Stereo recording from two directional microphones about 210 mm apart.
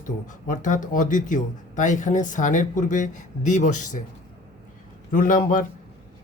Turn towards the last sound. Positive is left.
turn(degrees=40)  # may be behind; listen again after turning